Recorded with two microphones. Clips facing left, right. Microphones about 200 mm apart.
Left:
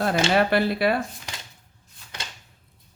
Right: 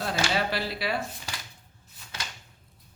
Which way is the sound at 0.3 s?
55° left (ahead or behind).